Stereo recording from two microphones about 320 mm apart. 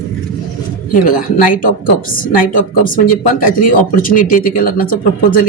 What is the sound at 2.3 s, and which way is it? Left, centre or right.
Speech, left.